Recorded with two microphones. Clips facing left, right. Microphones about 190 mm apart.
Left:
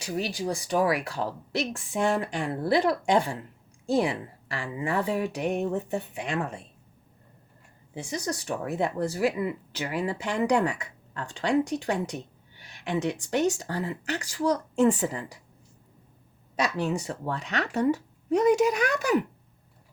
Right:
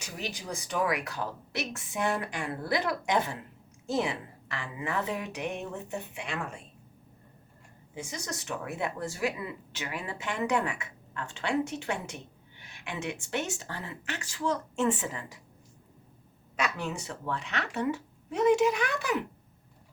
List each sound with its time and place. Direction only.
0.0 s speech: 35° left (ahead or behind)
7.9 s speech: 35° left (ahead or behind)
16.6 s speech: 35° left (ahead or behind)